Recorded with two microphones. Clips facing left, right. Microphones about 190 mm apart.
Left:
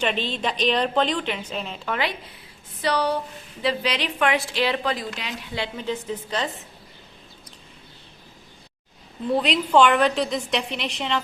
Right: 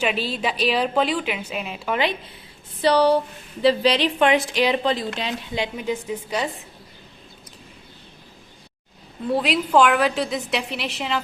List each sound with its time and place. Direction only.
0.0 s a woman's voice: 5° right (ahead or behind)
2.8 s a woman's voice: 30° right (ahead or behind)
5.5 s a woman's voice: 15° right (ahead or behind)
9.3 s a woman's voice: 5° right (ahead or behind)